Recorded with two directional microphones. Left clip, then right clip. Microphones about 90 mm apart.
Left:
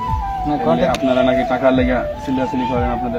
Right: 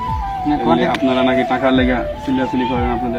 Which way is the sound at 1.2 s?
85° left.